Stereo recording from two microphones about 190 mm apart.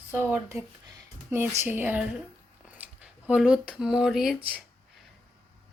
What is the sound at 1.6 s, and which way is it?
A woman's voice, 10° right (ahead or behind).